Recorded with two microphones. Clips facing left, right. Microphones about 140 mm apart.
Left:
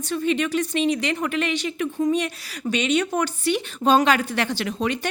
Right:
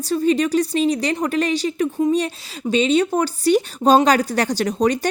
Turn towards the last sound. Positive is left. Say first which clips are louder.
# right 6 dB
turn(degrees=-40)  # may be behind; listen again after turning